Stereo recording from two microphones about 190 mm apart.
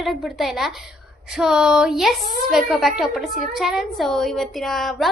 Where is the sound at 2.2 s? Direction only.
45° right (ahead or behind).